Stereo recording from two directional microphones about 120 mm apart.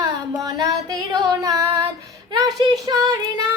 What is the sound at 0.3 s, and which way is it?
Music, 30° right (ahead or behind).